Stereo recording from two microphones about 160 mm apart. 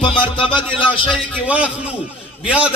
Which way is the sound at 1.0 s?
10° right (ahead or behind).